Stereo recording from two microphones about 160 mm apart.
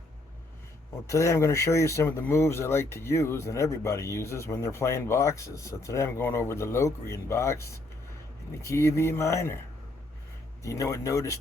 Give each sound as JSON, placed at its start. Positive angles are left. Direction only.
{"t": 1.0, "sound": "speech", "side_deg": 20}
{"t": 10.6, "sound": "speech", "side_deg": 20}